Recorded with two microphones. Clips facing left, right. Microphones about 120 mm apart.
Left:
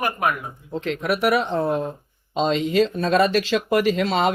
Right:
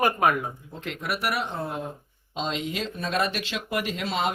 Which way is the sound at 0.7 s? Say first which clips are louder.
Left 12 dB; 90° left.